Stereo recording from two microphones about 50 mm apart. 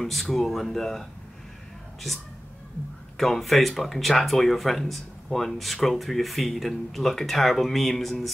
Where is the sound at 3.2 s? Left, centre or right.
Centre.